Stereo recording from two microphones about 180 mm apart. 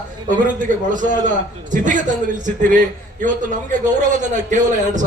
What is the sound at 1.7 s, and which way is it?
A man's voice, 45° right (ahead or behind).